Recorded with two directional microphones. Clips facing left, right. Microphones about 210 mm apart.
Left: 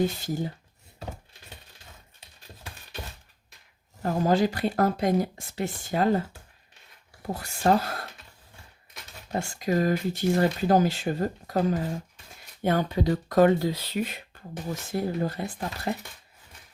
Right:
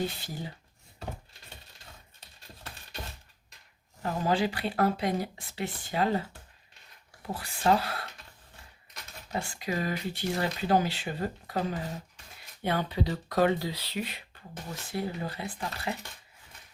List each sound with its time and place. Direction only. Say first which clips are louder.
0.2 s speech: left 9 dB; 45° left (ahead or behind)
4.0 s speech: left 5 dB; 45° left (ahead or behind)
9.3 s speech: left 6 dB; 45° left (ahead or behind)